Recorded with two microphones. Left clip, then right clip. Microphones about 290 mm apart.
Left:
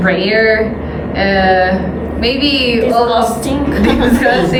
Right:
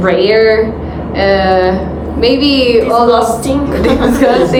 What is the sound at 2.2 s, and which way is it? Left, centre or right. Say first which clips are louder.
Music: right 4 dB; centre.